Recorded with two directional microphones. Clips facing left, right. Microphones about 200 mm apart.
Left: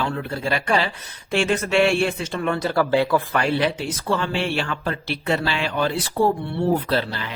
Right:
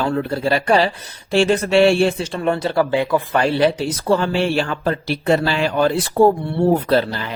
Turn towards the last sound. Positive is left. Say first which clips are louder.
# right 5 dB
turn(degrees=-40)  # may be behind; listen again after turning